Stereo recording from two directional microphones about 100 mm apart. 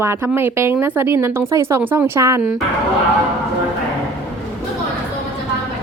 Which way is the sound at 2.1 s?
30° right (ahead or behind).